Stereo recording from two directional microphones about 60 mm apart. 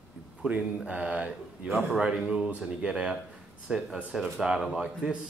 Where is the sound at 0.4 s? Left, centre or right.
Right.